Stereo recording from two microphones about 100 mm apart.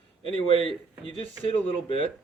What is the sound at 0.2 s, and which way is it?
Speech, 65° left (ahead or behind).